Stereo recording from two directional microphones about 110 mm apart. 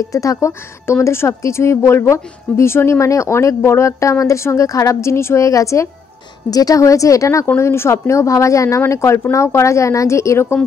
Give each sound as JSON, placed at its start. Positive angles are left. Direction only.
{"t": 0.1, "sound": "speech", "side_deg": 30}